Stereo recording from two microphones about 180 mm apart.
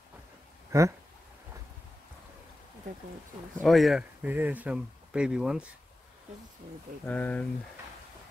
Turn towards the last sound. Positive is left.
turn(degrees=10)  # may be behind; listen again after turning